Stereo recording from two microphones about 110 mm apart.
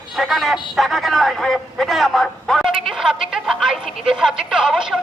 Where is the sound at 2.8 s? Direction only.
5° right (ahead or behind).